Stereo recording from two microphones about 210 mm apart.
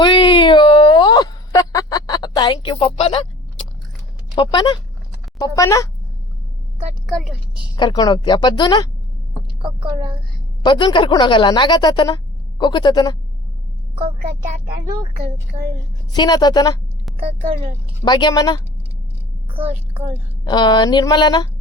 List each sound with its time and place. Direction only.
0.0 s a sound: 20° left (ahead or behind)
4.4 s speech: 20° left (ahead or behind)
7.1 s a woman's voice: centre (ahead or behind)
7.8 s speech: 20° left (ahead or behind)
9.6 s speech: 20° right (ahead or behind)
10.6 s speech: 20° left (ahead or behind)
16.1 s speech: 20° left (ahead or behind)
17.1 s a sound: centre (ahead or behind)
18.0 s speech: 20° left (ahead or behind)
19.5 s a woman's voice: 25° right (ahead or behind)
20.4 s speech: 20° left (ahead or behind)